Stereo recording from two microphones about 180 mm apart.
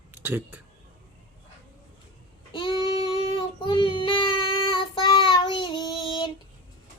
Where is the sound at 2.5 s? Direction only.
25° left (ahead or behind).